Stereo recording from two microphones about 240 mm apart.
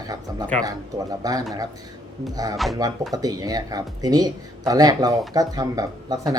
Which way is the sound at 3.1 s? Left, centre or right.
Centre.